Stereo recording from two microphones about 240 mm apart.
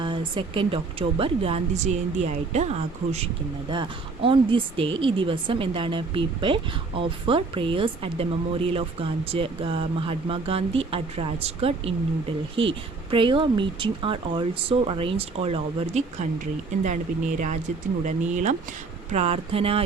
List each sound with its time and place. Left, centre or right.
0.0 s speech: centre